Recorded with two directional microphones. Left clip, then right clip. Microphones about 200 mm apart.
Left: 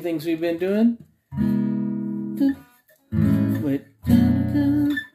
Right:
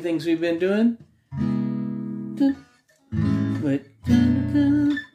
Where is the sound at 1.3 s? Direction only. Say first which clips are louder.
Left 3 dB; 30° left (ahead or behind).